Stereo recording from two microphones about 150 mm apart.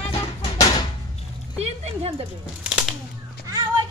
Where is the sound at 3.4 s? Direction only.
25° right (ahead or behind).